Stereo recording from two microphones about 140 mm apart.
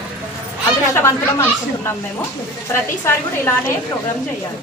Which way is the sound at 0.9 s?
20° left (ahead or behind).